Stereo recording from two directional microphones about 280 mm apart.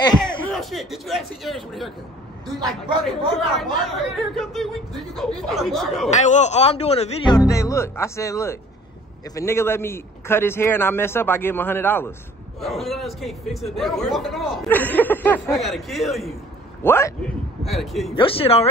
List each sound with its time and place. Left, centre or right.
0.0 s a sound: centre
0.4 s speech: centre
3.1 s speech: centre
6.0 s a man's voice: left; by 18.1 s centre
18.1 s speech: centre